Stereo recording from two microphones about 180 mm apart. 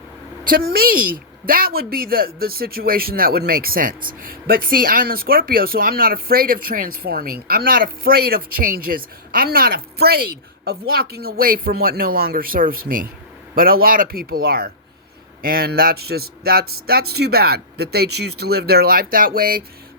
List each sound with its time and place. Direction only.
0.4 s a woman's voice: 55° right (ahead or behind)